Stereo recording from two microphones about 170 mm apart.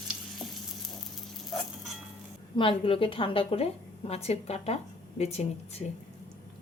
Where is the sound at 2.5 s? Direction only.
30° left (ahead or behind).